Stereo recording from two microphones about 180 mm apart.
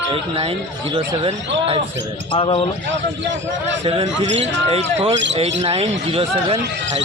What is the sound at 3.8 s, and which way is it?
Speech, 30° right (ahead or behind).